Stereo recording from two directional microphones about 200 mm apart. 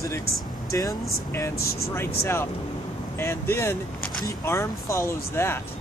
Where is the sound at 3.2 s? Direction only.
10° left (ahead or behind).